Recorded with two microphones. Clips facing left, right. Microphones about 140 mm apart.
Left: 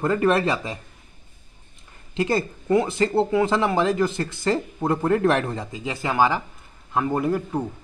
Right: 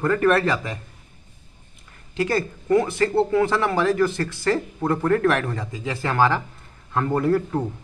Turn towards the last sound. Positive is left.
turn(degrees=15)  # may be behind; listen again after turning